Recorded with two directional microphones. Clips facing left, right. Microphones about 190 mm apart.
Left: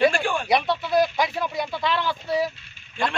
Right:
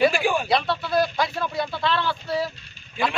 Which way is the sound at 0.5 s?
15° left (ahead or behind).